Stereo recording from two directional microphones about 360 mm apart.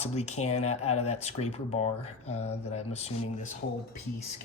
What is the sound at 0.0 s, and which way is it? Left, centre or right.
Speech, centre.